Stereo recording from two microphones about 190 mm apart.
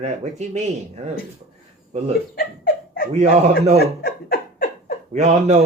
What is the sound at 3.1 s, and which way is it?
Speech, 35° right (ahead or behind).